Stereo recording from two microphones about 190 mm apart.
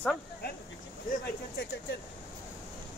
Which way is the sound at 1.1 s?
60° left (ahead or behind).